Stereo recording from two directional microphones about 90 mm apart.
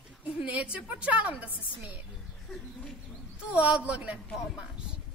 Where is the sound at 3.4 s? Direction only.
15° right (ahead or behind).